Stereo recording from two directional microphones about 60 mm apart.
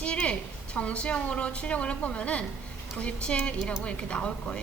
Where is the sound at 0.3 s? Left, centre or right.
Left.